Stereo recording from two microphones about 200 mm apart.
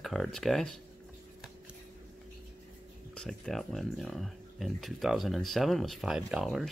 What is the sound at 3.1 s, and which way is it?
Speech, centre (ahead or behind).